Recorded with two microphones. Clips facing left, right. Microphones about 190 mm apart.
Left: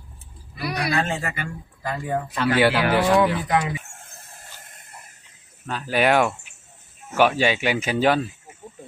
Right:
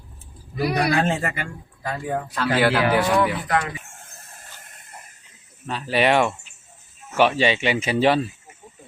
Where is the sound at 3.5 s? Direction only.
15° left (ahead or behind).